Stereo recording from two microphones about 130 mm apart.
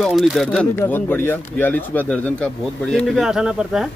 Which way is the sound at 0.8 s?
15° left (ahead or behind).